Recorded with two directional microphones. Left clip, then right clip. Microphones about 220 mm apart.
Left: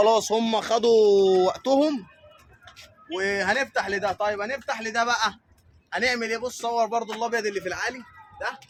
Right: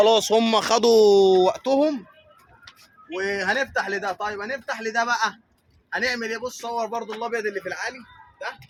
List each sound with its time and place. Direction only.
0.0 s speech: 30° right (ahead or behind)
1.6 s speech: 5° right (ahead or behind)
3.1 s a man's voice: 5° left (ahead or behind)
7.2 s a man's voice: 40° left (ahead or behind)